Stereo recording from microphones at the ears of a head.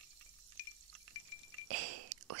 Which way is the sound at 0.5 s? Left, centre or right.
Left.